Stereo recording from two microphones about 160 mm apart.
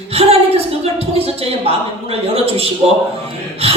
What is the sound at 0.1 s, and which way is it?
A woman's voice, 35° right (ahead or behind).